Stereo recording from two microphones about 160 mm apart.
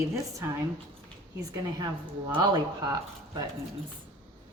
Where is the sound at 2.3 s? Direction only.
25° right (ahead or behind).